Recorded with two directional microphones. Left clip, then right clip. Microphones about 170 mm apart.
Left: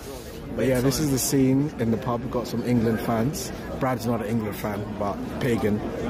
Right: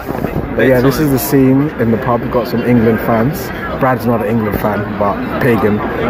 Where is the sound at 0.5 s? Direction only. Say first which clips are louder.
Right 12 dB; 15° left (ahead or behind).